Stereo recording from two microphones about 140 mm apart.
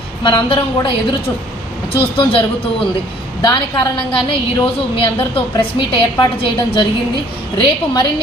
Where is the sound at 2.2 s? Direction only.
40° left (ahead or behind).